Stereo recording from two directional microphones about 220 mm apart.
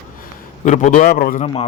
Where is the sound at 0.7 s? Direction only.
35° left (ahead or behind).